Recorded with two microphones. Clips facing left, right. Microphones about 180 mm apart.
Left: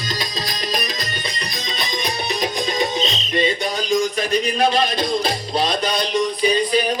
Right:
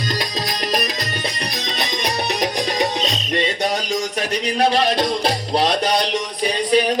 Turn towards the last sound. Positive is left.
turn(degrees=-75)  # may be behind; listen again after turning